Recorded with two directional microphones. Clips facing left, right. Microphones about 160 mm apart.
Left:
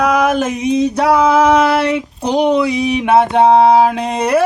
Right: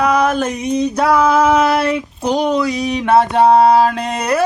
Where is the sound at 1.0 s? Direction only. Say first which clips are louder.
Left 1 dB; 15° left (ahead or behind).